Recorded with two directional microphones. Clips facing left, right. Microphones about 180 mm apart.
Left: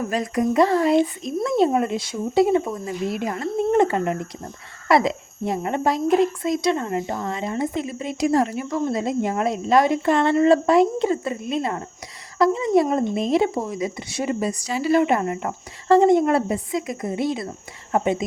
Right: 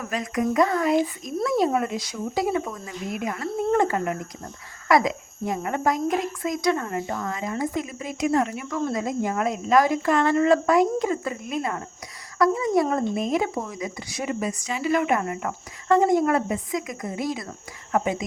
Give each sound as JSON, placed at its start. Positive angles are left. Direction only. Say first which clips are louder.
{"t": 0.0, "sound": "speech", "louder": "left 4 dB", "side_deg": 30}